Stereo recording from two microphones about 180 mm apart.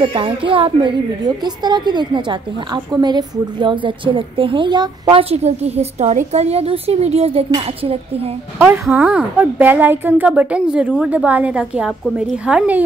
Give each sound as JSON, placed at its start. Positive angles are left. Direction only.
{"t": 0.0, "sound": "a woman's voice", "side_deg": -30}
{"t": 8.5, "sound": "a woman's voice", "side_deg": -10}